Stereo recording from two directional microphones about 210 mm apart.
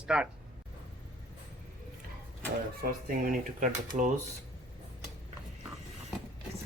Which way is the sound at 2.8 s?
40° right (ahead or behind).